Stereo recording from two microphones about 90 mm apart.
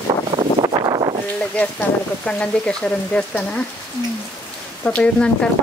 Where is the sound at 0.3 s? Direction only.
55° right (ahead or behind).